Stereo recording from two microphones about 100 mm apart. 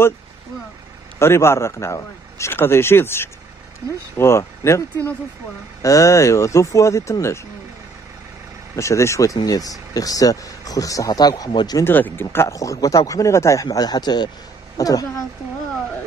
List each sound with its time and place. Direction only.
1.2 s a man's voice: 25° left (ahead or behind)
8.7 s speech: 30° left (ahead or behind)
11.8 s speech: 20° left (ahead or behind); by 15.2 s 40° left (ahead or behind)